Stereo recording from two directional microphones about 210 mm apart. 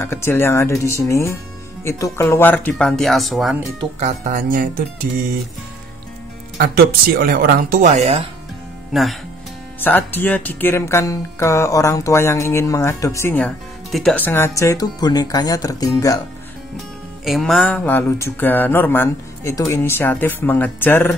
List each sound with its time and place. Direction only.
0.0 s music: 10° left (ahead or behind)
4.0 s speech: 40° right (ahead or behind)
7.2 s speech: 40° right (ahead or behind)
8.9 s speech: centre (ahead or behind)
9.8 s music: 10° left (ahead or behind)
17.2 s music: centre (ahead or behind)